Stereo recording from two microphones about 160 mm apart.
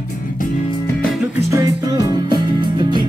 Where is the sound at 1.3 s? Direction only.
20° right (ahead or behind).